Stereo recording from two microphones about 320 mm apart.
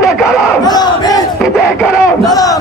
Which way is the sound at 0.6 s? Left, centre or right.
Centre.